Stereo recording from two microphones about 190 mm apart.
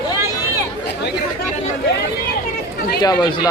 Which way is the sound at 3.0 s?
20° left (ahead or behind).